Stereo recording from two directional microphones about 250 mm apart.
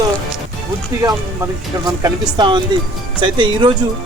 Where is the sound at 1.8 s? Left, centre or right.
Centre.